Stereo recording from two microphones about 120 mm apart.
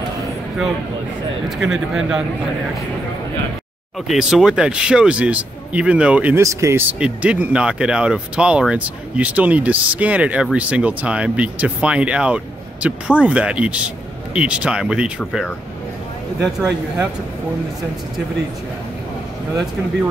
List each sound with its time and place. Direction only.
1.6 s speech: 5° right (ahead or behind)
4.1 s speech: 5° right (ahead or behind)
6.3 s speech: 25° right (ahead or behind)
6.9 s speech: 10° right (ahead or behind)
16.5 s speech: 5° right (ahead or behind)